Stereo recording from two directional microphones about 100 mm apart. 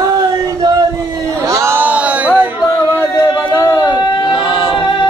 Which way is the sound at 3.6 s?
35° left (ahead or behind).